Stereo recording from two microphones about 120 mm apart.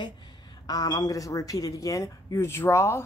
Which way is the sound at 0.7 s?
35° left (ahead or behind).